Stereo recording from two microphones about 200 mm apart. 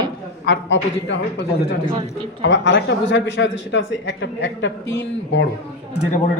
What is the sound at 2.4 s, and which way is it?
A man's voice, 65° left (ahead or behind).